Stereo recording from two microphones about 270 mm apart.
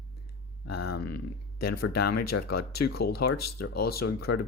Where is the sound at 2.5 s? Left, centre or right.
Left.